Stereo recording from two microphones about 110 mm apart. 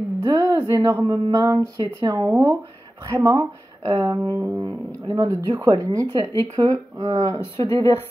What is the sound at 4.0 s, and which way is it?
Speech, 20° right (ahead or behind).